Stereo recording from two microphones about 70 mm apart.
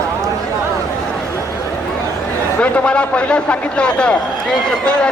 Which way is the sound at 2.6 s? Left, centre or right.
Centre.